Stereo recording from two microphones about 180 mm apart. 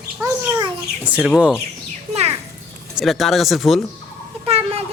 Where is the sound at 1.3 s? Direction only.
5° right (ahead or behind).